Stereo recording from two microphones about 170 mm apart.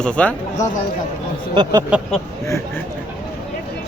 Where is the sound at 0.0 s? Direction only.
5° left (ahead or behind).